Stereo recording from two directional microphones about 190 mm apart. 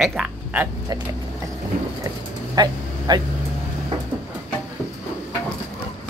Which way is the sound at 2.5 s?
20° right (ahead or behind).